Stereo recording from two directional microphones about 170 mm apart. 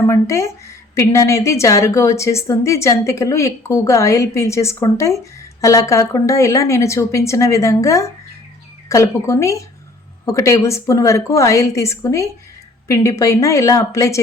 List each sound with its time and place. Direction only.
0.0 s a woman's voice: 15° left (ahead or behind)